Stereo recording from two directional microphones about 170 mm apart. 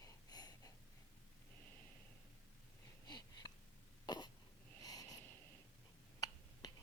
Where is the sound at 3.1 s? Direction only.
25° left (ahead or behind).